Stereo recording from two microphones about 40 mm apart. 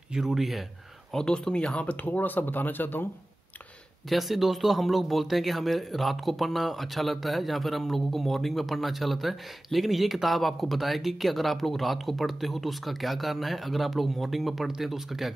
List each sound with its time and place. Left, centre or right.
0.1 s speech: centre
1.1 s speech: centre
2.0 s speech: left
4.1 s speech: centre